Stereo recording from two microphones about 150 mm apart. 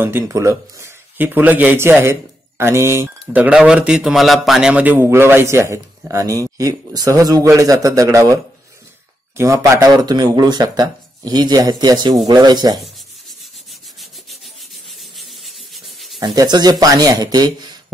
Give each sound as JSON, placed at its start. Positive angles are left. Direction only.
{"t": 0.0, "sound": "speech", "side_deg": -15}
{"t": 9.4, "sound": "speech", "side_deg": -20}
{"t": 15.1, "sound": "rub", "side_deg": 0}
{"t": 16.2, "sound": "speech", "side_deg": -25}